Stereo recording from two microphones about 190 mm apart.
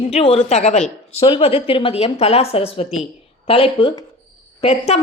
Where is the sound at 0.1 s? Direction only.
30° left (ahead or behind).